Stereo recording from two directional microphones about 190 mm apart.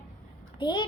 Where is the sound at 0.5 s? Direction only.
25° left (ahead or behind).